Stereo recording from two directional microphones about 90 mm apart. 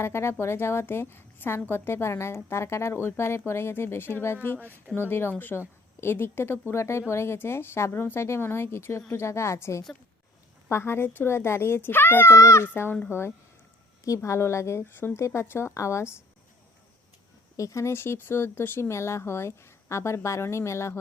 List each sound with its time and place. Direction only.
0.0 s a woman's voice: 30° left (ahead or behind)
17.6 s speech: 35° left (ahead or behind)